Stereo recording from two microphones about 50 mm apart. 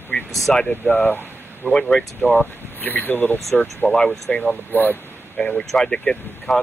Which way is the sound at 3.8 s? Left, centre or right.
Left.